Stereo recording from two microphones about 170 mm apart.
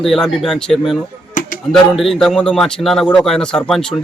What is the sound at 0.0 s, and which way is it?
A man's voice, centre (ahead or behind).